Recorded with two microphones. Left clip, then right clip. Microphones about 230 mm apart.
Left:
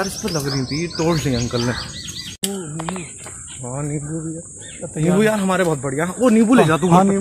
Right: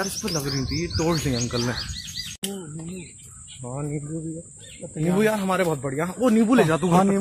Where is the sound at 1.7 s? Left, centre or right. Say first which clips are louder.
Left 3 dB; right.